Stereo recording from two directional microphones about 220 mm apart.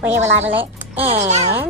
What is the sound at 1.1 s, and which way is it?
Speech, 30° right (ahead or behind).